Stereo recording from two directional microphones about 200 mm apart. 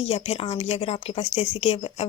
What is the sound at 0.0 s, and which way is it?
Speech, 30° left (ahead or behind).